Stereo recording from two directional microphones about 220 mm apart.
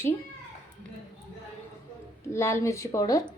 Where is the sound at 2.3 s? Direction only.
10° left (ahead or behind).